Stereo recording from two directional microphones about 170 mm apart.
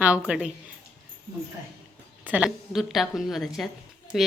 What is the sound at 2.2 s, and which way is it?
Speech, 5° right (ahead or behind).